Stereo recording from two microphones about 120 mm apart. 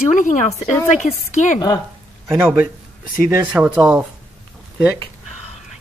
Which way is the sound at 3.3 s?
20° right (ahead or behind).